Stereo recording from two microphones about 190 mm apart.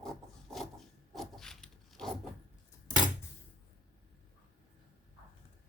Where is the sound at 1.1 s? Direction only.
Centre (ahead or behind).